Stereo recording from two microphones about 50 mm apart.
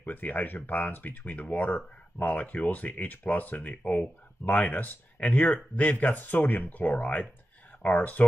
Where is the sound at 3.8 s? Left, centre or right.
Centre.